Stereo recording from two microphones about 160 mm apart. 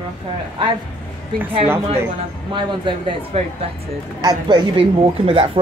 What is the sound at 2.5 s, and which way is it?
Speech, 30° right (ahead or behind).